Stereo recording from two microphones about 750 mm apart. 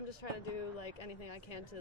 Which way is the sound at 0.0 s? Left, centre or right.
Left.